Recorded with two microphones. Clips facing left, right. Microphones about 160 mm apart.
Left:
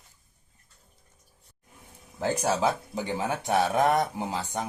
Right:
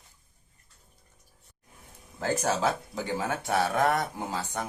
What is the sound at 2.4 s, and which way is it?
Speech, 15° left (ahead or behind).